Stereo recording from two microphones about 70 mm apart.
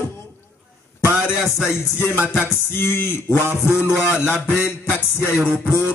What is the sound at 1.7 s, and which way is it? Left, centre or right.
Speech, left.